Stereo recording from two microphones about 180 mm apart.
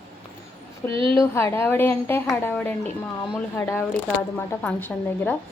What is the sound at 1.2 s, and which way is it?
A woman's voice, 15° left (ahead or behind).